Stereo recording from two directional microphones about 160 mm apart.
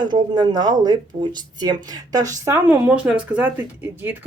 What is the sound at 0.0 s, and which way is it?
Speech, 25° right (ahead or behind).